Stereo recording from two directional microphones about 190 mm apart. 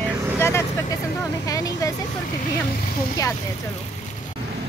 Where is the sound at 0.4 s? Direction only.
15° left (ahead or behind).